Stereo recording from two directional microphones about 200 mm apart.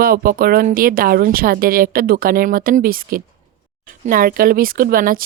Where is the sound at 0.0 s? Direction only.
45° right (ahead or behind).